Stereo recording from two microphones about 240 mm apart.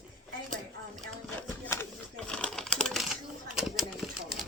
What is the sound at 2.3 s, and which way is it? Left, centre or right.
Typewriter, centre.